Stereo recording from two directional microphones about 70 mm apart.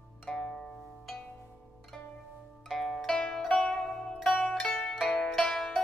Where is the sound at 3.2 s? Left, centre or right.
Centre.